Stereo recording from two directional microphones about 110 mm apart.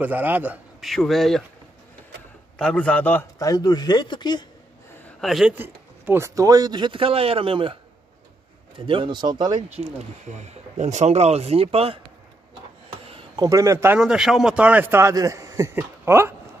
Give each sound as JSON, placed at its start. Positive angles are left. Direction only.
{"t": 0.0, "sound": "a man's voice", "side_deg": -15}
{"t": 0.7, "sound": "speech", "side_deg": 0}
{"t": 2.6, "sound": "a man's voice", "side_deg": 10}
{"t": 3.3, "sound": "speech", "side_deg": 35}
{"t": 5.2, "sound": "speech", "side_deg": 0}
{"t": 5.5, "sound": "speech", "side_deg": -20}
{"t": 8.7, "sound": "speech", "side_deg": -55}
{"t": 9.6, "sound": "speech", "side_deg": -90}
{"t": 13.4, "sound": "speech", "side_deg": -30}
{"t": 13.9, "sound": "a man's voice", "side_deg": -5}